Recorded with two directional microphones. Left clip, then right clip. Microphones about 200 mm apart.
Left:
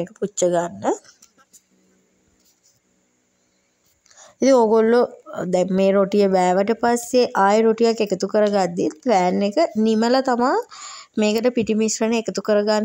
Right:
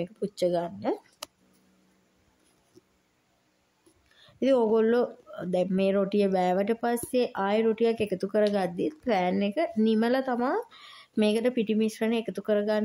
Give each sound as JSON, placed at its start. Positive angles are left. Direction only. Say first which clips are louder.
{"t": 0.0, "sound": "speech", "louder": "left 7 dB", "side_deg": 25}
{"t": 4.2, "sound": "speech", "louder": "left 9 dB", "side_deg": 30}